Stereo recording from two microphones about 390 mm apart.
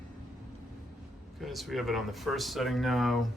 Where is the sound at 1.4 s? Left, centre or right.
Centre.